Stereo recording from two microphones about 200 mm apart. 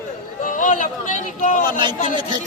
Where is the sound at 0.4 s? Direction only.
40° left (ahead or behind).